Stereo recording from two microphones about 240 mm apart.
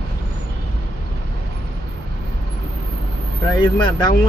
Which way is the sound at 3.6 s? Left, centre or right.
Centre.